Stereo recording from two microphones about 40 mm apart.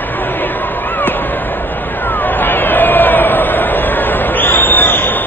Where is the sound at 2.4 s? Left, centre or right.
Left.